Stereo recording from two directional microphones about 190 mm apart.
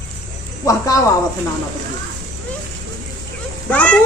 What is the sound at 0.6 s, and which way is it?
Cricket, 15° left (ahead or behind).